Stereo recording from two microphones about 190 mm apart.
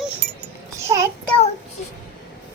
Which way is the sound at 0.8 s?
15° right (ahead or behind).